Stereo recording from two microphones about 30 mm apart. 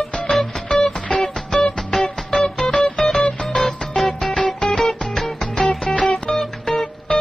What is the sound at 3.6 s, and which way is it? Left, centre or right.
Music, centre.